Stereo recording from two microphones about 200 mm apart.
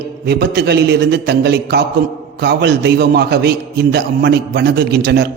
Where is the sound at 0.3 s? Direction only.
55° right (ahead or behind).